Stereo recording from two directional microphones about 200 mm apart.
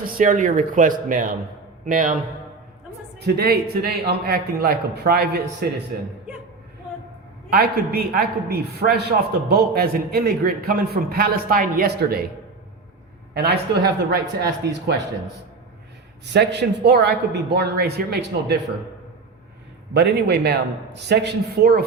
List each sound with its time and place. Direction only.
0.0 s speech: 45° right (ahead or behind)
3.2 s a man's voice: 50° right (ahead or behind)
7.5 s a man's voice: 50° right (ahead or behind)
13.3 s a man's voice: 55° right (ahead or behind)
16.3 s a man's voice: 55° right (ahead or behind)
19.9 s a man's voice: 55° right (ahead or behind)